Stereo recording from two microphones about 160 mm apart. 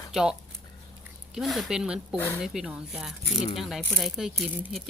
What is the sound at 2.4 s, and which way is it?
Speech, centre (ahead or behind).